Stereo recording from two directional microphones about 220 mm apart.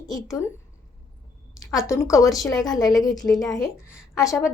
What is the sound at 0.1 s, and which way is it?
Speech, 15° left (ahead or behind).